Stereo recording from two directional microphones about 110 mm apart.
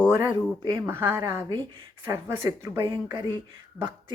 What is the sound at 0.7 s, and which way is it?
Speech, 20° right (ahead or behind).